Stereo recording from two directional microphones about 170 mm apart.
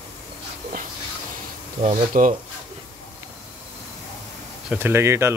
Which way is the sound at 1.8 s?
45° right (ahead or behind).